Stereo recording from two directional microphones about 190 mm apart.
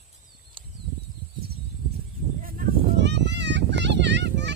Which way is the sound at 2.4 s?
50° right (ahead or behind).